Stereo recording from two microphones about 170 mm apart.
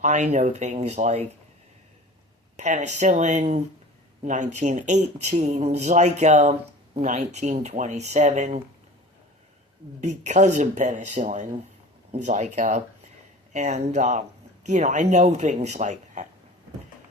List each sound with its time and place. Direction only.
0.0 s speech: 45° right (ahead or behind)
2.6 s speech: 45° right (ahead or behind)
10.0 s speech: 45° right (ahead or behind)